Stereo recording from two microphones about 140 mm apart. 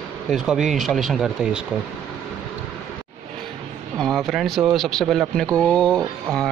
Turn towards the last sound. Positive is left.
turn(degrees=0)  # may be behind; listen again after turning